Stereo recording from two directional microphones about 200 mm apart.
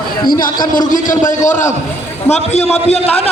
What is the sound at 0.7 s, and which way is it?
A man's voice, 40° left (ahead or behind).